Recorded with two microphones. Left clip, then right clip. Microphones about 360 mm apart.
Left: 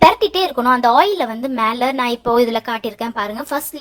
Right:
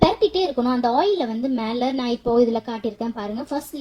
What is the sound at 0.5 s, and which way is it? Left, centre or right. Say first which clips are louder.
A woman's voice: left 8 dB; left.